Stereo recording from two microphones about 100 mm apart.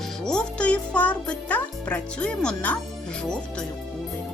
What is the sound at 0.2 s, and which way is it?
Speech, 5° left (ahead or behind).